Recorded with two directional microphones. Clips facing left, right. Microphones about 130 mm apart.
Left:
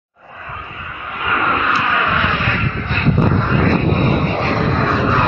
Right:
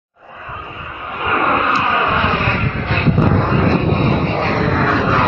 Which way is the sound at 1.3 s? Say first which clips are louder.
Right 2 dB; 45° right (ahead or behind).